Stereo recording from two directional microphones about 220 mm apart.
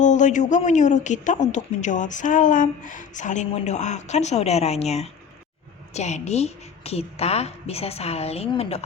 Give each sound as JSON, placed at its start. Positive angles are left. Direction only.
{"t": 0.0, "sound": "a woman's voice", "side_deg": 35}